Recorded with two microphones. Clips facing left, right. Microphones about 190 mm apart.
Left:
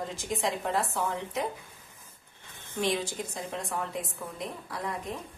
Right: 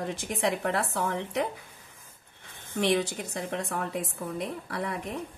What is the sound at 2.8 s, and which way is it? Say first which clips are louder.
A woman's voice: right 4 dB; 65° right (ahead or behind).